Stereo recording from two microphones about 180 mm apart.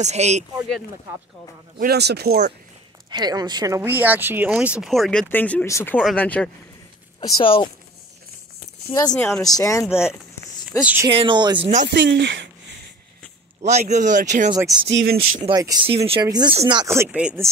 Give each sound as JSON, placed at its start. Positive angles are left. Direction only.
{"t": 0.0, "sound": "speech", "side_deg": -40}
{"t": 1.8, "sound": "speech", "side_deg": -65}
{"t": 3.1, "sound": "speech", "side_deg": -20}
{"t": 7.2, "sound": "speech", "side_deg": 25}
{"t": 9.1, "sound": "speech", "side_deg": 15}
{"t": 10.8, "sound": "speech", "side_deg": -10}
{"t": 11.1, "sound": "speech", "side_deg": -30}
{"t": 11.9, "sound": "speech", "side_deg": -70}
{"t": 13.6, "sound": "speech", "side_deg": -40}
{"t": 14.5, "sound": "speech", "side_deg": -20}
{"t": 14.9, "sound": "speech", "side_deg": -75}
{"t": 15.5, "sound": "speech", "side_deg": -20}
{"t": 16.8, "sound": "speech", "side_deg": -15}